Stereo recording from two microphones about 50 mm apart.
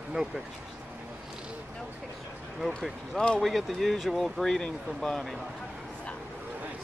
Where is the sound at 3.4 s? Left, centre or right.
Centre.